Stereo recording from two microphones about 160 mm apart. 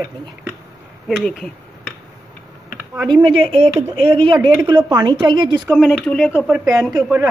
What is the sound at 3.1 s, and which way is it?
Speech, 35° right (ahead or behind).